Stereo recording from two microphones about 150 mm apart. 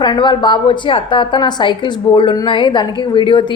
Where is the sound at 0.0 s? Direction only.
30° left (ahead or behind).